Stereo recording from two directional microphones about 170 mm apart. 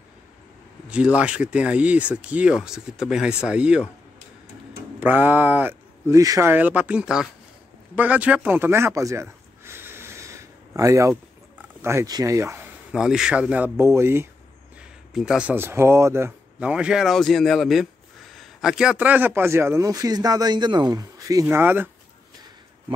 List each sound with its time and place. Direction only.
0.8 s a man's voice: 5° right (ahead or behind)
5.0 s a man's voice: 10° right (ahead or behind)
14.8 s a man's voice: 5° right (ahead or behind)